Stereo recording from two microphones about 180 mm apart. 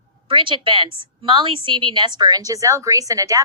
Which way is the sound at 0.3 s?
30° right (ahead or behind).